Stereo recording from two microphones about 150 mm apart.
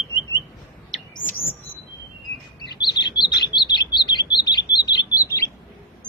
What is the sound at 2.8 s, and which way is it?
Chirp, 30° left (ahead or behind).